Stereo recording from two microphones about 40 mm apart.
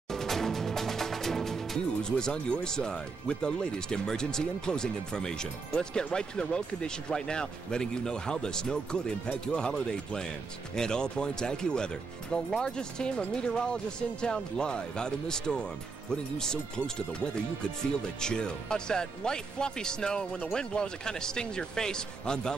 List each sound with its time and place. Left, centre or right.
0.1 s music: centre
2.0 s speech: centre